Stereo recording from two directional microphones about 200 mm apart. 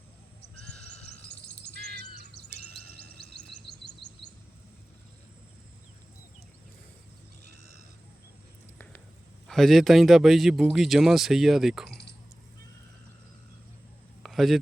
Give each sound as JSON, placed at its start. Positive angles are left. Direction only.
{"t": 0.7, "sound": "crow", "side_deg": 5}
{"t": 3.7, "sound": "chirp", "side_deg": 55}
{"t": 9.5, "sound": "speech", "side_deg": 0}
{"t": 14.2, "sound": "a sound", "side_deg": 0}